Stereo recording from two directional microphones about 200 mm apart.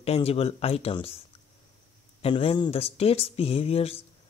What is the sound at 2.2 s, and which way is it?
Speech, 25° left (ahead or behind).